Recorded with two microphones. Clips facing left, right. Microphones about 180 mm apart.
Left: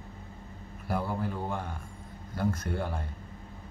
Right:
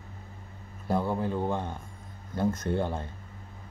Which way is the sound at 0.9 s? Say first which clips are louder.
Right 4 dB; 20° right (ahead or behind).